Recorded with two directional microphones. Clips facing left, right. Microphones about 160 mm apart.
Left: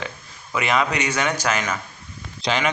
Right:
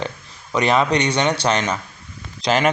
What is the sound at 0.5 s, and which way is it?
Speech, 35° right (ahead or behind).